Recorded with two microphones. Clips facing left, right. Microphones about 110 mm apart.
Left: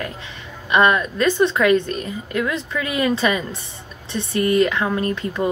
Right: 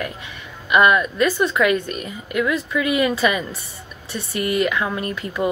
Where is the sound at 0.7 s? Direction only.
30° left (ahead or behind).